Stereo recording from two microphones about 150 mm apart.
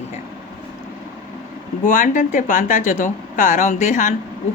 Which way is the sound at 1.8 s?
65° left (ahead or behind).